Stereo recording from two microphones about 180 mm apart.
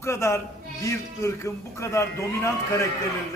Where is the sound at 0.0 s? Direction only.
15° left (ahead or behind).